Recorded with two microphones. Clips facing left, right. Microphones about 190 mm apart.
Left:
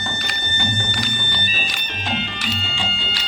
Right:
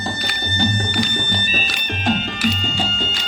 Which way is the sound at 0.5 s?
35° right (ahead or behind).